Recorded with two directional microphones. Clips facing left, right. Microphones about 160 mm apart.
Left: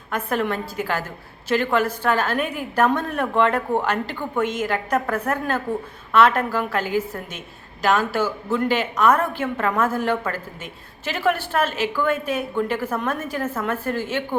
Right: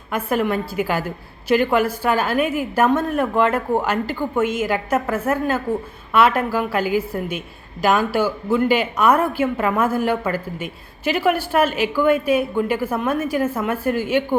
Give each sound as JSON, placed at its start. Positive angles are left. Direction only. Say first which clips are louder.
{"t": 0.1, "sound": "a woman's voice", "louder": "right 3 dB", "side_deg": -10}